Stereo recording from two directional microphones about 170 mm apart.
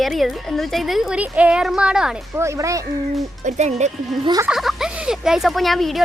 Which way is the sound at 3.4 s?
40° right (ahead or behind).